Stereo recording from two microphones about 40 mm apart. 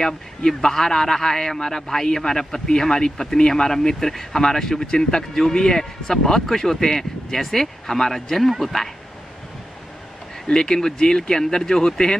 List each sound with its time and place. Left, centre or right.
0.0 s a man's voice: centre
10.4 s a man's voice: centre